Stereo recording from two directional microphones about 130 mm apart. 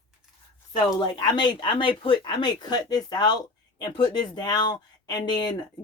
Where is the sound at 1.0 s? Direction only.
35° left (ahead or behind).